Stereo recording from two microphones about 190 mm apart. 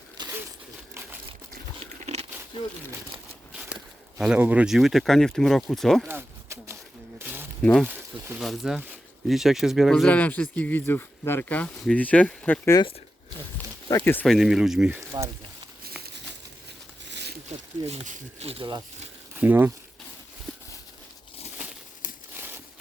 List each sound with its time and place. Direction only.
0.2 s crumpling: 25° right (ahead or behind)
1.8 s crunch: 35° right (ahead or behind)
3.5 s walk: 5° right (ahead or behind)
4.2 s speech: 5° right (ahead or behind)
6.1 s a sound: 10° right (ahead or behind)
7.6 s speech: 5° left (ahead or behind)
7.9 s speech: 10° right (ahead or behind)
8.4 s speech: centre (ahead or behind)
14.0 s speech: 10° left (ahead or behind)
17.1 s a sound: 65° right (ahead or behind)
17.8 s speech: 40° right (ahead or behind)
19.3 s speech: 10° right (ahead or behind)
22.4 s a sound: 10° right (ahead or behind)